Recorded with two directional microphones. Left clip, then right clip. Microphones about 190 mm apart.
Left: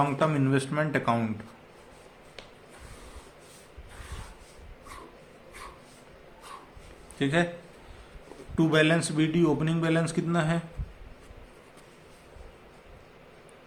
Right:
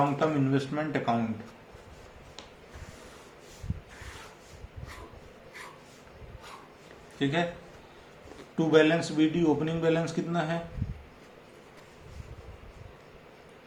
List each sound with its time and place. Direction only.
0.2 s a man's voice: 55° left (ahead or behind)
7.2 s a man's voice: 50° left (ahead or behind)
8.5 s a man's voice: 45° left (ahead or behind)